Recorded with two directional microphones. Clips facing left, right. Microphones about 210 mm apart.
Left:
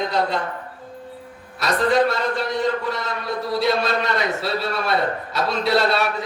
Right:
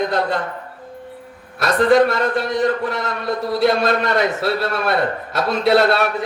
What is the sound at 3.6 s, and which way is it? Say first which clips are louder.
A man's voice: right 4 dB; 50° right (ahead or behind).